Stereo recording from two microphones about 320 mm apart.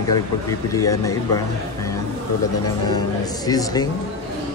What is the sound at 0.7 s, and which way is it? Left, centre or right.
Speech, centre.